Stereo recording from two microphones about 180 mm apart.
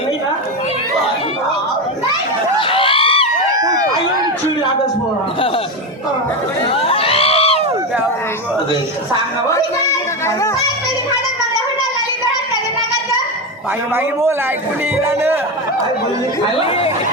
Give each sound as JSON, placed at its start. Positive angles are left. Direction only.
{"t": 2.6, "sound": "a sound", "side_deg": 30}
{"t": 6.7, "sound": "crowd", "side_deg": 30}
{"t": 13.9, "sound": "a man's voice", "side_deg": -15}